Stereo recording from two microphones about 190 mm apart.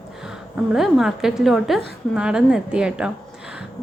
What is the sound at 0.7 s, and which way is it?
A woman's voice, centre (ahead or behind).